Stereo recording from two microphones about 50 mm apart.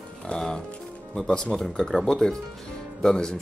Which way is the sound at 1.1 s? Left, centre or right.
Centre.